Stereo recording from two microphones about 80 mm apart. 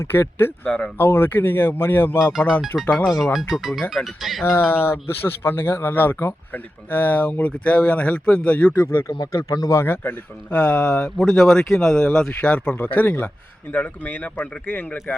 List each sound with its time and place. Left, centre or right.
0.0 s speech: left
0.6 s speech: centre
0.9 s speech: left
2.9 s speech: centre
4.4 s speech: left
9.5 s speech: left
9.7 s speech: left